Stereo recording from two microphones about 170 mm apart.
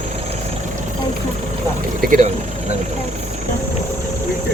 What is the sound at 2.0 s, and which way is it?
Speech, 50° right (ahead or behind).